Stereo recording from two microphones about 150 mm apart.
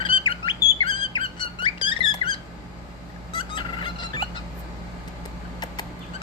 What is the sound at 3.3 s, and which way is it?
Fowl, 35° left (ahead or behind).